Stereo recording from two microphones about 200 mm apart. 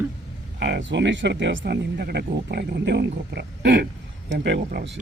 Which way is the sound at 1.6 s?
50° right (ahead or behind).